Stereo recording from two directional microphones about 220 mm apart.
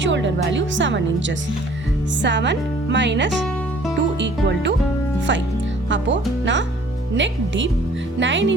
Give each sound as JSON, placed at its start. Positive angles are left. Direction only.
{"t": 0.0, "sound": "speech", "side_deg": -55}
{"t": 2.2, "sound": "speech", "side_deg": -55}
{"t": 5.9, "sound": "speech", "side_deg": -55}